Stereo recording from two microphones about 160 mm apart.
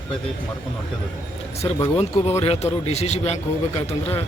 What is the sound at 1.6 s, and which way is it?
A man's voice, 35° left (ahead or behind).